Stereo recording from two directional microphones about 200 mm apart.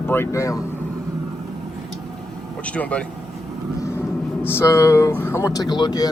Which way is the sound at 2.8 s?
5° left (ahead or behind).